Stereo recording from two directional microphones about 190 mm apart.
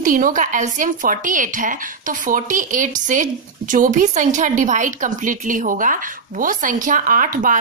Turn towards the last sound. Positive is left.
turn(degrees=-45)  # may be behind; listen again after turning